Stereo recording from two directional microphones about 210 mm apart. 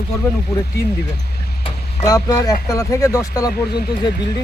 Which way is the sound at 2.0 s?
15° left (ahead or behind).